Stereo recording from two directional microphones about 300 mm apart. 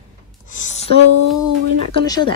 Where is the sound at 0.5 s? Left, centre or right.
Left.